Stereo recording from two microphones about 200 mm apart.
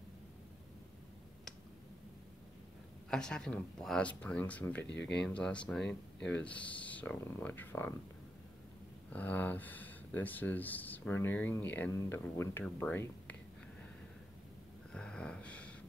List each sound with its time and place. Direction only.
3.1 s speech: 5° left (ahead or behind)
4.8 s speech: 60° left (ahead or behind)
5.2 s speech: 5° left (ahead or behind)
9.1 s speech: 10° left (ahead or behind)
14.9 s a sound: 5° left (ahead or behind)